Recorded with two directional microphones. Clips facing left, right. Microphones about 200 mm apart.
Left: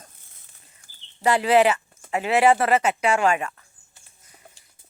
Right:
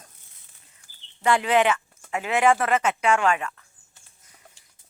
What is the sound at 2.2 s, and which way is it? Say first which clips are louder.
Speech: left 2 dB; 35° left (ahead or behind).